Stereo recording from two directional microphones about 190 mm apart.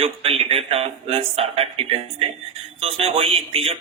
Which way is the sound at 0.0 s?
30° right (ahead or behind).